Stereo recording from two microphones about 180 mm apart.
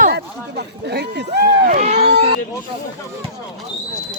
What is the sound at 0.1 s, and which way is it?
Run, 65° right (ahead or behind).